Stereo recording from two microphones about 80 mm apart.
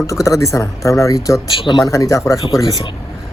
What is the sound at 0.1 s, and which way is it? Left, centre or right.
Speech, left.